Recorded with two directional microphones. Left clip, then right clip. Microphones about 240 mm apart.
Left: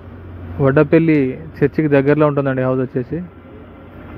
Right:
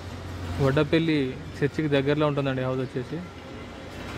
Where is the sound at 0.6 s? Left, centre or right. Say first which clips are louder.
Left 10 dB; centre.